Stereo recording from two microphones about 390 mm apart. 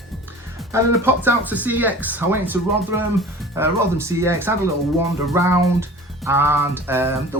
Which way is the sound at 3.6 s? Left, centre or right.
Centre.